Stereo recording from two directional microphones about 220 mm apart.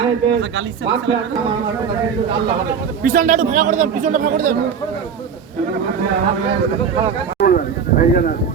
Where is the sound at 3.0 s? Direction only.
35° right (ahead or behind).